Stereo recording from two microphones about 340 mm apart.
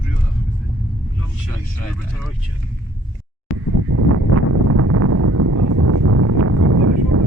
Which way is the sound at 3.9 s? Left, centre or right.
Right.